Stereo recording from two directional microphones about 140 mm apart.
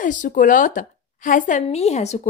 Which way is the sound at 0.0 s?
65° left (ahead or behind).